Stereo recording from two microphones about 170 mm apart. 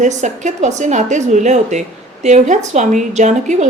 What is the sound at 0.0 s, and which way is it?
A woman's voice, 45° right (ahead or behind).